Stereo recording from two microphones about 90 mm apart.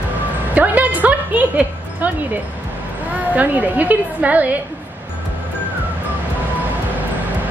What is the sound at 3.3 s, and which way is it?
A woman's voice, 20° right (ahead or behind).